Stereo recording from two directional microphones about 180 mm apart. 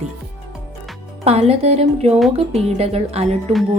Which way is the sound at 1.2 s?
35° right (ahead or behind).